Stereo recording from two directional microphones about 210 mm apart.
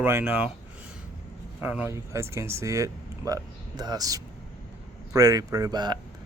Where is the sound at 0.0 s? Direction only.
10° right (ahead or behind).